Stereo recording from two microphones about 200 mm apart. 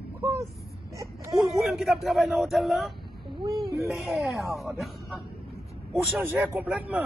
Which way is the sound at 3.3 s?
25° right (ahead or behind).